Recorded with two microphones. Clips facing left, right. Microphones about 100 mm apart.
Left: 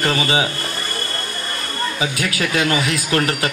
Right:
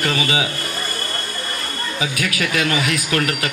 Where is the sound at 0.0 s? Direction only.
35° left (ahead or behind).